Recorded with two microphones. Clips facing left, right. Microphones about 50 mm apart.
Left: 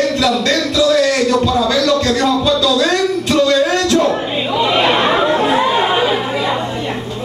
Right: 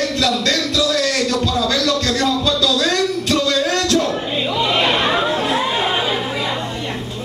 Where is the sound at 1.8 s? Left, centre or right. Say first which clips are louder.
Left 4 dB; centre.